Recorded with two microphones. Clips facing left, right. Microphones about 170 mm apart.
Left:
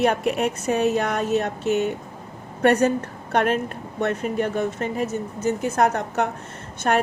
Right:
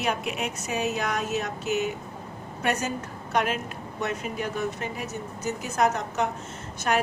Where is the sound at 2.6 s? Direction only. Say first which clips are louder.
Left 10 dB; 60° left (ahead or behind).